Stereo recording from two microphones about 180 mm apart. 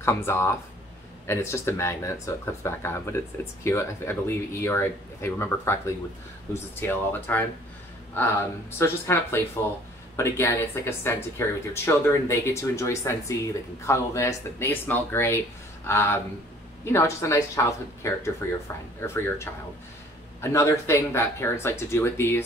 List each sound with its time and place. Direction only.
0.0 s speech: 15° left (ahead or behind)